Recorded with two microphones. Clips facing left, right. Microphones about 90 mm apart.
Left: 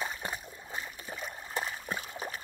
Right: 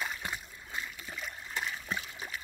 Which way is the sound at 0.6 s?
25° left (ahead or behind).